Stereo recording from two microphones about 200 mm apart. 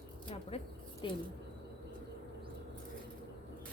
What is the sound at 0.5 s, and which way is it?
Speech, 30° left (ahead or behind).